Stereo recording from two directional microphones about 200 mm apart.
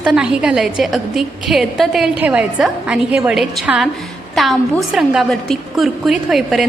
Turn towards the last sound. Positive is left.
turn(degrees=0)  # may be behind; listen again after turning